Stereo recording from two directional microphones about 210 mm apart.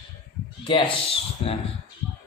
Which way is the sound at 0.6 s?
25° left (ahead or behind).